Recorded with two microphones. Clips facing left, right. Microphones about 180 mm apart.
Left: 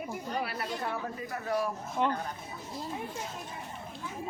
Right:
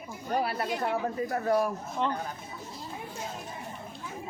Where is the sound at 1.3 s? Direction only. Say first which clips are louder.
Right 4 dB; 45° right (ahead or behind).